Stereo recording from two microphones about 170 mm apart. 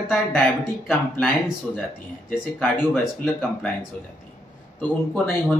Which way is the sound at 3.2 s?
Centre (ahead or behind).